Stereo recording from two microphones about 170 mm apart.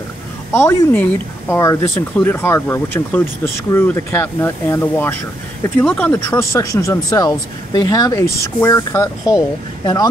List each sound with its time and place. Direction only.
0.5 s speech: 15° left (ahead or behind)